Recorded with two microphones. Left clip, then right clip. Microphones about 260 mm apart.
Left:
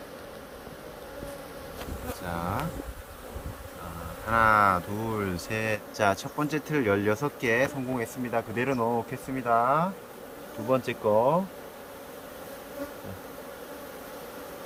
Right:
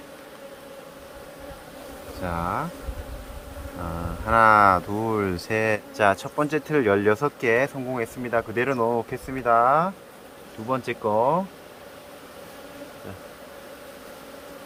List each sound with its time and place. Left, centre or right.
2.3 s speech: centre
4.3 s speech: right